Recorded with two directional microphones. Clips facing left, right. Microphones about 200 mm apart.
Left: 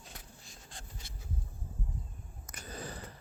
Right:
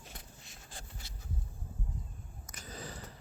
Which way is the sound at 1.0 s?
55° left (ahead or behind).